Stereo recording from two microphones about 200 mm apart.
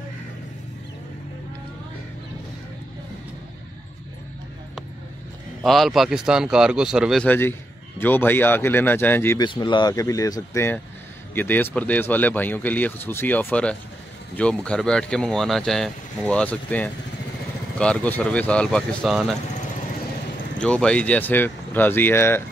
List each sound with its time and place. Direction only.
5.6 s speech: centre (ahead or behind)
9.5 s speech: 20° left (ahead or behind); by 19.3 s centre (ahead or behind)
20.5 s speech: 5° left (ahead or behind)